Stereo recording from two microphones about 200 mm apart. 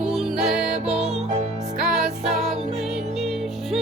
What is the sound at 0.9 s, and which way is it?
Music, 30° right (ahead or behind).